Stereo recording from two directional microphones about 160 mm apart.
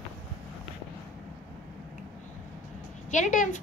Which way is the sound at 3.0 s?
50° left (ahead or behind).